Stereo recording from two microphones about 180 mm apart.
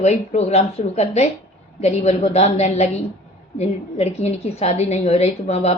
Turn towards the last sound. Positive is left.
turn(degrees=35)  # may be behind; listen again after turning